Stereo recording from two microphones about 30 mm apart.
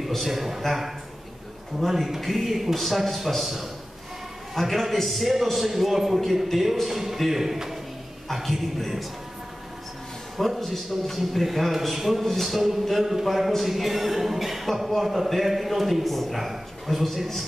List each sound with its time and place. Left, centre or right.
0.3 s a man's voice: centre
8.3 s a man's voice: centre
10.3 s a man's voice: centre